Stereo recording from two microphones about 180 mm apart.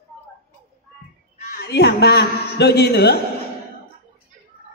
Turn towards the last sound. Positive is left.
turn(degrees=65)  # may be behind; listen again after turning